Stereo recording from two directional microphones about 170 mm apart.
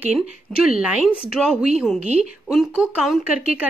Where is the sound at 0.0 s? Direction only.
5° right (ahead or behind).